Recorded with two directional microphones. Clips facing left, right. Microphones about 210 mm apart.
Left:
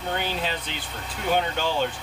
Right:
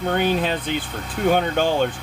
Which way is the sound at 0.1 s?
55° right (ahead or behind).